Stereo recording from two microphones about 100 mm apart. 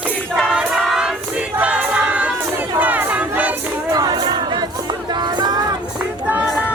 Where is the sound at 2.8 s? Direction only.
15° right (ahead or behind).